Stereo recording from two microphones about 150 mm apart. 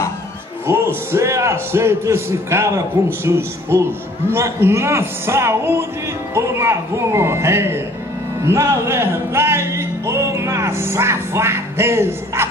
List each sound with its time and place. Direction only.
0.7 s a man's voice: 15° right (ahead or behind)
8.5 s music: 15° right (ahead or behind)